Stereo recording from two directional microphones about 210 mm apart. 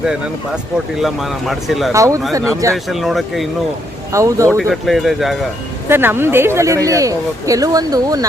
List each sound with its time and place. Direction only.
0.0 s speech: 5° right (ahead or behind)
1.9 s speech: 15° right (ahead or behind)
2.7 s speech: centre (ahead or behind)
4.1 s speech: 15° right (ahead or behind)
4.5 s speech: centre (ahead or behind); by 8.3 s 15° right (ahead or behind)